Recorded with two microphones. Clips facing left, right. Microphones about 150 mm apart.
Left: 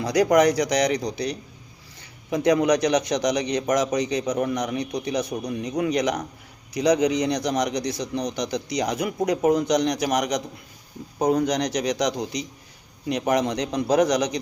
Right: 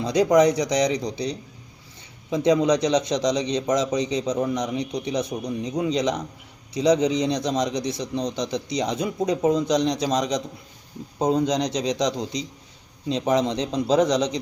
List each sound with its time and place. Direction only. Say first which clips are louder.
0.0 s speech: right 1 dB; 25° right (ahead or behind)